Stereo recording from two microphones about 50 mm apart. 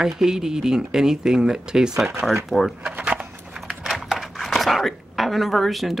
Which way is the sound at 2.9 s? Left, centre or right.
Right.